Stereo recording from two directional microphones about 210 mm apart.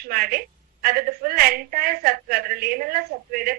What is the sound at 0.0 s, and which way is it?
A woman's voice, 45° right (ahead or behind).